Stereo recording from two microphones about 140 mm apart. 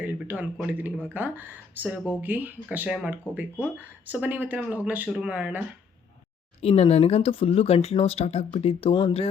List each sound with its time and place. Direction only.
0.0 s a sound: 10° right (ahead or behind)
0.7 s speech: 15° right (ahead or behind)
6.6 s speech: 45° left (ahead or behind)